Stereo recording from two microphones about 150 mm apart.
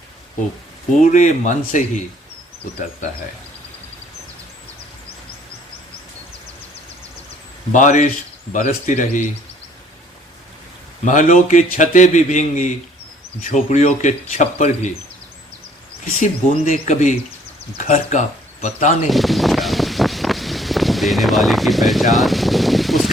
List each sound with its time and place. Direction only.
1.1 s speech: 55° left (ahead or behind)
7.7 s speech: 55° left (ahead or behind)
11.0 s speech: 55° left (ahead or behind)
16.2 s speech: 60° left (ahead or behind)
19.0 s wind: centre (ahead or behind)